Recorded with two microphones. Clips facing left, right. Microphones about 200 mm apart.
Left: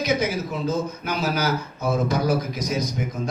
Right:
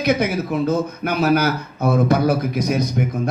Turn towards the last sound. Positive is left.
turn(degrees=-60)  # may be behind; listen again after turning